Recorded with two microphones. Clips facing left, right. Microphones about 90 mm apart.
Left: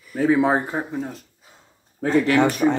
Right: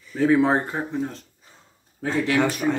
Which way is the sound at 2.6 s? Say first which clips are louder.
Left 4 dB; 40° left (ahead or behind).